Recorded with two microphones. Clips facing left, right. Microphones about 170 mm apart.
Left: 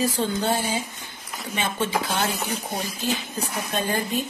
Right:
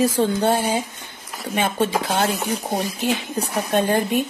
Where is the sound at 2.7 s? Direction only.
60° right (ahead or behind).